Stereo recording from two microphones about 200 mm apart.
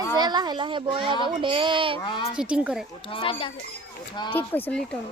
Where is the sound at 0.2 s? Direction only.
20° right (ahead or behind).